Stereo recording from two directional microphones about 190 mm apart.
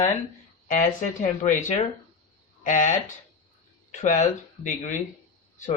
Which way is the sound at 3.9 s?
40° left (ahead or behind).